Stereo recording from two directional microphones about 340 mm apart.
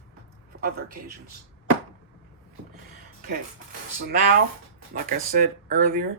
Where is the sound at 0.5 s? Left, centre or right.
Right.